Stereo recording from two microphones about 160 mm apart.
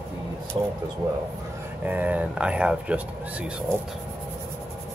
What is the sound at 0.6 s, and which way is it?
Speech, 30° right (ahead or behind).